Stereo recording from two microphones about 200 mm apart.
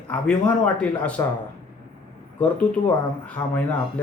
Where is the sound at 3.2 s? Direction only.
5° left (ahead or behind).